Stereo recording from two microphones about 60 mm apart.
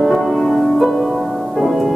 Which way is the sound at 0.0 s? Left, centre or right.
Centre.